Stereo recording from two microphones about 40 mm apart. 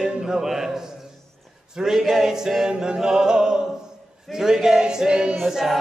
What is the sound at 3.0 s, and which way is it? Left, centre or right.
Speech, centre.